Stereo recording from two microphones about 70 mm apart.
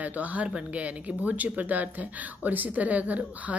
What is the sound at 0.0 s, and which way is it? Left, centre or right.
A woman's voice, right.